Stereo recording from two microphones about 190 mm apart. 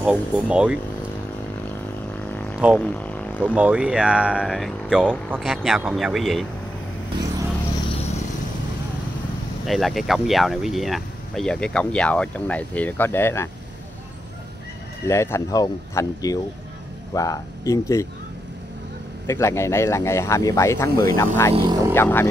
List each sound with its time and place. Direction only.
0.0 s speech: 5° right (ahead or behind)
2.3 s music: 5° left (ahead or behind)
3.4 s speech: 5° right (ahead or behind)
9.7 s speech: centre (ahead or behind)
15.0 s speech: 15° left (ahead or behind)
19.2 s speech: 15° left (ahead or behind)
21.5 s speech: 20° right (ahead or behind)
21.9 s speech: 10° left (ahead or behind)